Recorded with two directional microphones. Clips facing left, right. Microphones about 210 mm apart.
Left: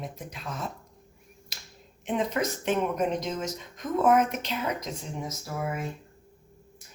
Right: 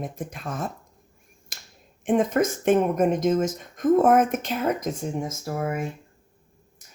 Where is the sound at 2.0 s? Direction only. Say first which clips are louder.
Right 7 dB; 50° right (ahead or behind).